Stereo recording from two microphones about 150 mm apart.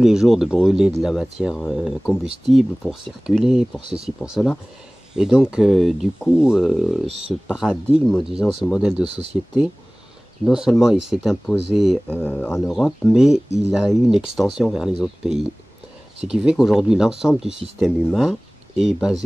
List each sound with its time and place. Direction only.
0.0 s speech: 5° right (ahead or behind)
9.1 s speech: 45° right (ahead or behind)
10.4 s speech: 5° right (ahead or behind)
12.1 s speech: 10° left (ahead or behind)